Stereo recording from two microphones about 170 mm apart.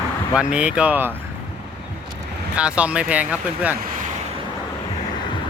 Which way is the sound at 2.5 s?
5° right (ahead or behind).